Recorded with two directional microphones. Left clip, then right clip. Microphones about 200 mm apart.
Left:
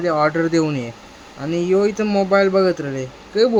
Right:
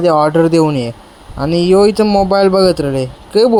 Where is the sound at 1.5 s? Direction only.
25° right (ahead or behind).